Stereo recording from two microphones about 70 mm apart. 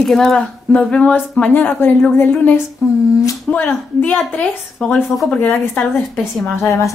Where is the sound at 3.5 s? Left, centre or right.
Left.